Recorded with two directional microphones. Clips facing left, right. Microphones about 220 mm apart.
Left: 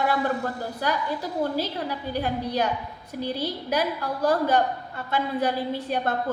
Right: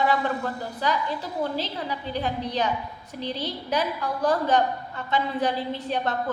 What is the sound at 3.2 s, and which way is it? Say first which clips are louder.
A woman's voice: left 2 dB; 10° left (ahead or behind).